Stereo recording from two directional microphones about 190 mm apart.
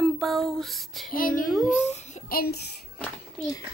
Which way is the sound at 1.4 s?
Centre (ahead or behind).